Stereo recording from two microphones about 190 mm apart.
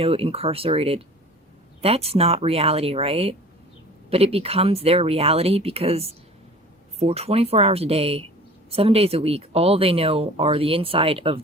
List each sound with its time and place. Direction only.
0.0 s speech: 30° right (ahead or behind)